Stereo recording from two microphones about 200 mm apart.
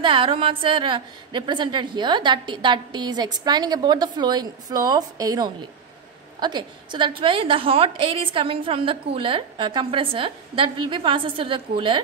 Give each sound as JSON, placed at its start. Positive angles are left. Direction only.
{"t": 0.0, "sound": "a woman's voice", "side_deg": -25}